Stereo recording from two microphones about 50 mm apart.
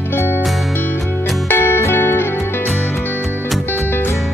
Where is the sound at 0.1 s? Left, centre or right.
Left.